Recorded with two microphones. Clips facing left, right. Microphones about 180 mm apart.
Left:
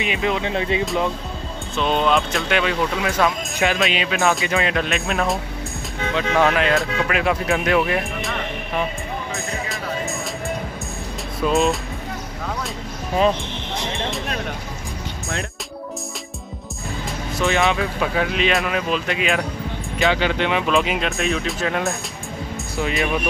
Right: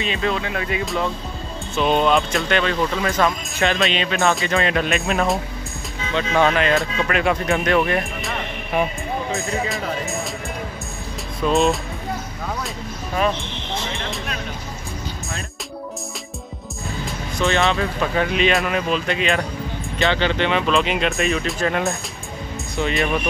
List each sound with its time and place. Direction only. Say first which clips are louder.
0.0 s speech: left 1 dB; 15° left (ahead or behind)
1.8 s speech: right 2 dB; 5° right (ahead or behind)
9.7 s music: right 1 dB; centre (ahead or behind)
11.4 s speech: right 1 dB; centre (ahead or behind)
16.8 s music: even; centre (ahead or behind)
17.6 s speech: even; 5° left (ahead or behind)